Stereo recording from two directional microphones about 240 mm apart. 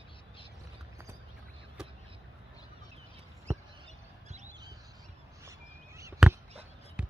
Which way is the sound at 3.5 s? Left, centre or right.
Centre.